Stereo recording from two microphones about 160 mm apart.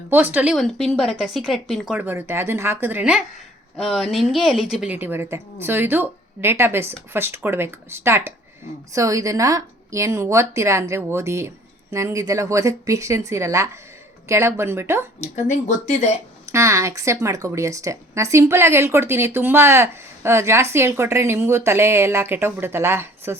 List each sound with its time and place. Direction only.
0.1 s speech: 10° right (ahead or behind)
0.5 s a woman's voice: centre (ahead or behind); by 15.0 s 15° right (ahead or behind)
15.2 s speech: 45° left (ahead or behind)
16.5 s speech: 20° right (ahead or behind)